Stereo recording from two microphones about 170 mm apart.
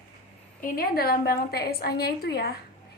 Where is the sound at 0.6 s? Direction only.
60° left (ahead or behind).